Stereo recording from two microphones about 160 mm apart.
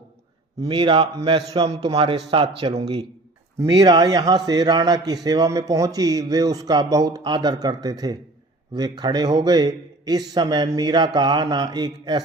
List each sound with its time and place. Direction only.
0.6 s a man's voice: 30° right (ahead or behind)
3.6 s a man's voice: 25° right (ahead or behind)